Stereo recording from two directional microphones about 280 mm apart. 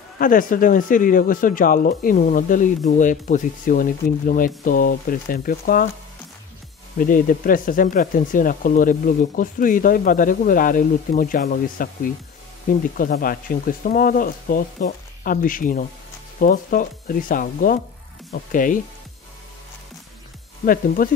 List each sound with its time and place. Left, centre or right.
0.2 s speech: left
7.0 s speech: left
20.6 s speech: left